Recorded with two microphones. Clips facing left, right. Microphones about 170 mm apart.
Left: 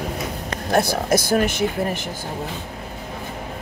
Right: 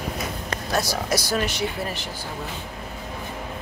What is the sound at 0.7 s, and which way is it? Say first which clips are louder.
Speech: left 6 dB; 55° left (ahead or behind).